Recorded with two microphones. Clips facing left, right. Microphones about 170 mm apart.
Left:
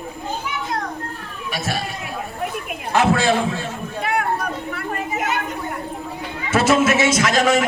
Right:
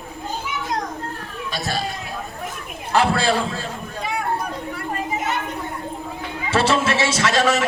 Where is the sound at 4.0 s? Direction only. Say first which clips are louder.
Left 5 dB; 60° left (ahead or behind).